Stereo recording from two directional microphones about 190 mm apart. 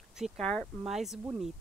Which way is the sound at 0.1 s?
Centre (ahead or behind).